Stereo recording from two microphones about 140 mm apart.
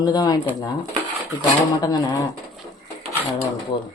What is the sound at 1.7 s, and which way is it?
Speech, 30° left (ahead or behind).